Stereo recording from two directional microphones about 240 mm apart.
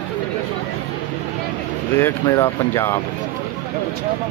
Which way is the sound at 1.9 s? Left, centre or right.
Centre.